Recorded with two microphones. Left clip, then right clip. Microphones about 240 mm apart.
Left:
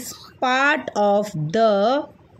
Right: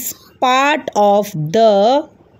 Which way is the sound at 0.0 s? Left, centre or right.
Centre.